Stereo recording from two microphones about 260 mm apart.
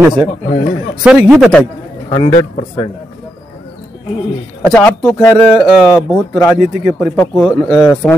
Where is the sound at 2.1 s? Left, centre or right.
Centre.